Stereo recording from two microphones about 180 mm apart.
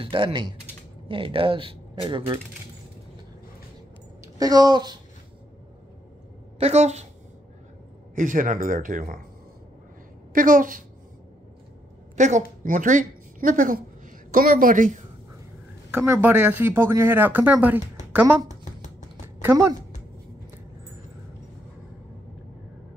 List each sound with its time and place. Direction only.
0.0 s speech: 30° right (ahead or behind)
4.4 s speech: 20° right (ahead or behind)
6.6 s a woman's voice: 35° right (ahead or behind)
8.1 s speech: 45° right (ahead or behind)
10.3 s speech: 50° right (ahead or behind)
12.2 s a woman's voice: 40° right (ahead or behind)
15.9 s speech: 10° right (ahead or behind)
18.6 s a sound: 40° left (ahead or behind)
19.2 s a sound: 15° right (ahead or behind)